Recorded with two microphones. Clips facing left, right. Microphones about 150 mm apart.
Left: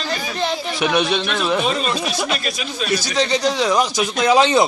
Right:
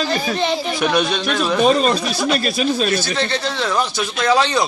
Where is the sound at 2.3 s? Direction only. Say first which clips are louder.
Right 7 dB; 35° right (ahead or behind).